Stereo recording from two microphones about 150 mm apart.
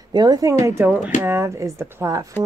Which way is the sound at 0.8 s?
10° right (ahead or behind).